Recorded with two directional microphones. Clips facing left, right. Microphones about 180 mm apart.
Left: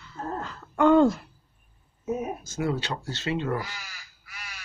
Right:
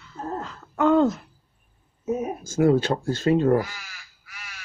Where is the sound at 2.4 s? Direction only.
50° right (ahead or behind).